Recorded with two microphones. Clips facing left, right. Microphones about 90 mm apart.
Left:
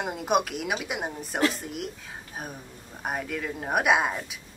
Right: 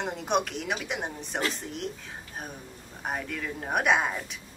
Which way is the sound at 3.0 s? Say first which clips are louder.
Left 2 dB; 5° left (ahead or behind).